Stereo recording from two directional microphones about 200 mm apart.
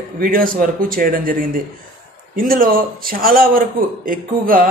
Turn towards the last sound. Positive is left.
turn(degrees=-45)  # may be behind; listen again after turning